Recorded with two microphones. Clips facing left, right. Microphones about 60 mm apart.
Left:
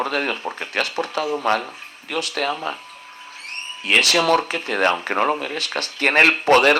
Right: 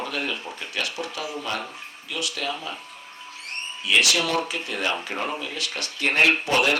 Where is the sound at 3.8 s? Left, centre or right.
Left.